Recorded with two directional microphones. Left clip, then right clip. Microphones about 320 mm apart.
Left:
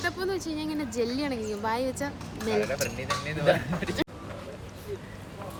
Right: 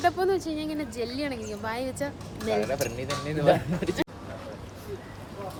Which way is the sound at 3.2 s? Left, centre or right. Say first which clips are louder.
Right 3 dB; right.